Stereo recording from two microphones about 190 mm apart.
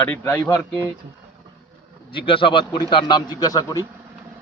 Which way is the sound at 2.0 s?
25° left (ahead or behind).